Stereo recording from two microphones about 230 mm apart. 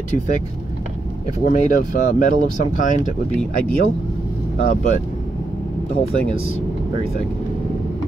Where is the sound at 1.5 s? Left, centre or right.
Left.